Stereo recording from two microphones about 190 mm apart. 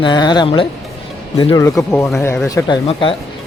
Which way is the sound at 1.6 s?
15° left (ahead or behind).